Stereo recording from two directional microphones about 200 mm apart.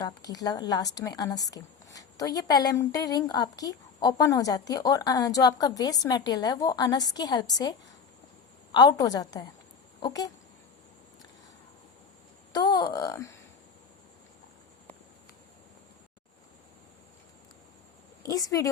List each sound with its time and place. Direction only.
0.0 s a woman's voice: 20° left (ahead or behind)
12.5 s a woman's voice: 20° left (ahead or behind)
18.2 s a woman's voice: 20° left (ahead or behind)